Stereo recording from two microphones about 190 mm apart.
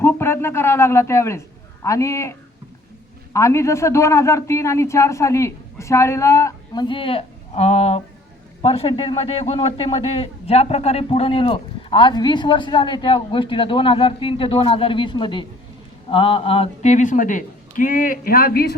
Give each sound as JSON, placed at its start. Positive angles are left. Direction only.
{"t": 0.0, "sound": "a man's voice", "side_deg": 10}
{"t": 3.3, "sound": "a man's voice", "side_deg": 15}